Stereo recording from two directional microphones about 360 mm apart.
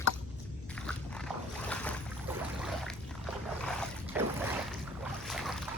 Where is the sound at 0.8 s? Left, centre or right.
Centre.